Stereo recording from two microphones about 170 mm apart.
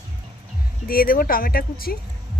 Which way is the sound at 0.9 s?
60° left (ahead or behind).